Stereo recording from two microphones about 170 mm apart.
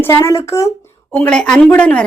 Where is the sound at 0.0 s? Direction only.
15° left (ahead or behind).